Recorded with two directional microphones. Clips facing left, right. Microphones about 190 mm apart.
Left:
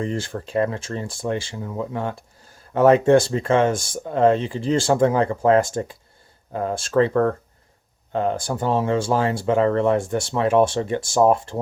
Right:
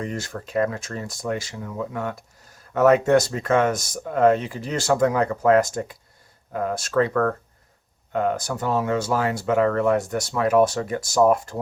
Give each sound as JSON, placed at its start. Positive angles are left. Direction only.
{"t": 0.0, "sound": "speech", "side_deg": 30}